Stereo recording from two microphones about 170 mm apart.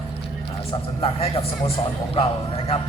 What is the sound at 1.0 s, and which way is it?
Speech, 35° left (ahead or behind).